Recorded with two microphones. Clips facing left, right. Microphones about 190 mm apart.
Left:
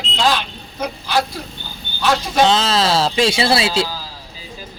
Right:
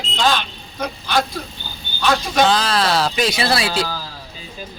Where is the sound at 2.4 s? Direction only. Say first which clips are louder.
Left 2 dB; 25° left (ahead or behind).